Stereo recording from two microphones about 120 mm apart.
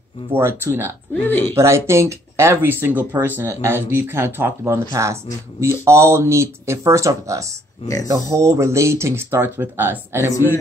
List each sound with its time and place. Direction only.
0.3 s speech: 20° right (ahead or behind)
1.2 s speech: 15° left (ahead or behind)
1.5 s speech: 20° right (ahead or behind)